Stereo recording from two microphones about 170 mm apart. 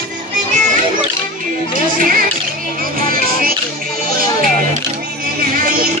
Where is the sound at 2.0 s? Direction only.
55° right (ahead or behind).